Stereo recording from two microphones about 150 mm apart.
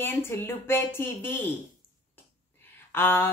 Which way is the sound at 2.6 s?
15° left (ahead or behind).